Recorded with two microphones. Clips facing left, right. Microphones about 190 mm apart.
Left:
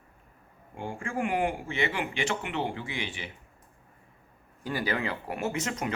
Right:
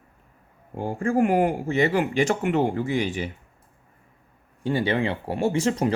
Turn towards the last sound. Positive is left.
turn(degrees=-30)  # may be behind; listen again after turning